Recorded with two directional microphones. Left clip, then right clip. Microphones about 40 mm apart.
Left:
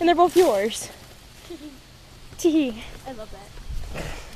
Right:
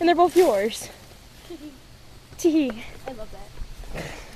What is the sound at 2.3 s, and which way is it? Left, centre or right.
Speech, right.